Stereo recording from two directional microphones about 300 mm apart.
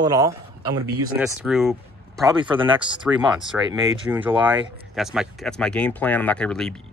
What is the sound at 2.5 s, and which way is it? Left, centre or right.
Speech, centre.